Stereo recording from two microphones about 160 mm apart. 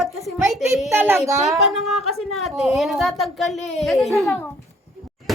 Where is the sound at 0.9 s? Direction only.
15° right (ahead or behind).